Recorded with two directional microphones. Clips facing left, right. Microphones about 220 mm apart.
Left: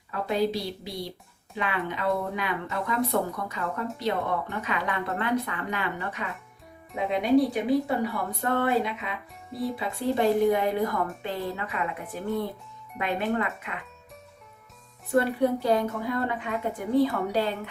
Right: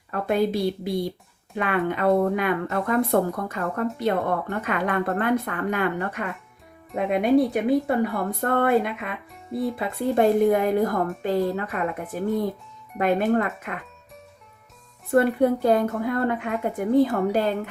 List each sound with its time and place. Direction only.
0.1 s speech: 50° right (ahead or behind)
13.0 s speech: 45° right (ahead or behind)
15.1 s speech: 55° right (ahead or behind)